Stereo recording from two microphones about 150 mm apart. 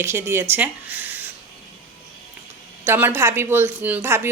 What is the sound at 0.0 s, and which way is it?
Speech, 15° right (ahead or behind).